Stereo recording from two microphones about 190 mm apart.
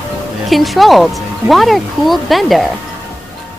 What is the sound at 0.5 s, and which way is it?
Speech, centre (ahead or behind).